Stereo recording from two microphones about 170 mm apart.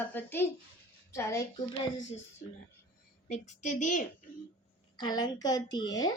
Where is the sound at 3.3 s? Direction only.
45° left (ahead or behind).